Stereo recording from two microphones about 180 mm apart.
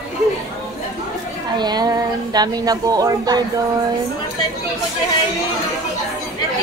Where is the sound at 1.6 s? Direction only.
25° right (ahead or behind).